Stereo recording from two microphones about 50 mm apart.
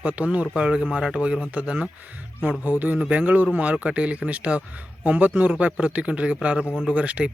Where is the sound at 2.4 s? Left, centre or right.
Right.